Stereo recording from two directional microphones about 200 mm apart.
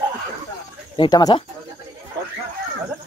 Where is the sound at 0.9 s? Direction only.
20° left (ahead or behind).